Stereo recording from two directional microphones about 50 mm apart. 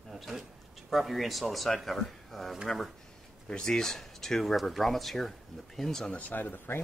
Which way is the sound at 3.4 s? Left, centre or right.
Centre.